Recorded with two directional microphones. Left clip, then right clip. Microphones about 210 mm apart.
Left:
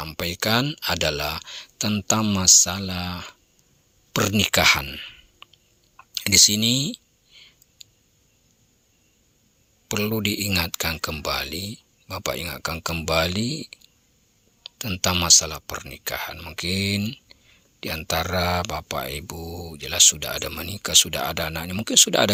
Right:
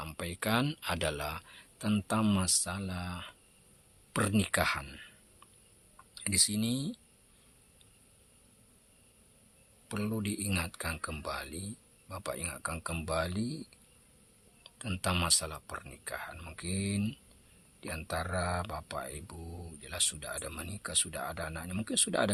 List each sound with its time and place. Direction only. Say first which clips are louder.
0.0 s speech: left 11 dB; 25° left (ahead or behind)
9.9 s speech: left 13 dB; 30° left (ahead or behind)